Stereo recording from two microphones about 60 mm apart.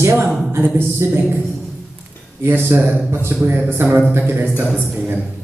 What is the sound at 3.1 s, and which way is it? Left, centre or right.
Speech, right.